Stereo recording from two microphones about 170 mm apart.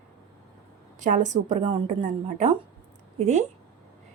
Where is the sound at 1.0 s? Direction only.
45° right (ahead or behind).